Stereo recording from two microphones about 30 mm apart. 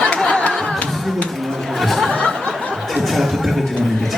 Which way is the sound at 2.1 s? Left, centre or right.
Left.